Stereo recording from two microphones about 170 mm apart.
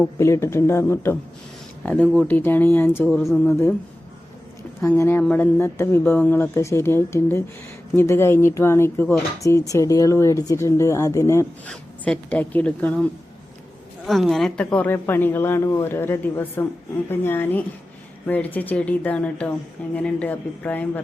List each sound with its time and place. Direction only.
0.2 s speech: 15° left (ahead or behind)
4.8 s speech: 15° left (ahead or behind)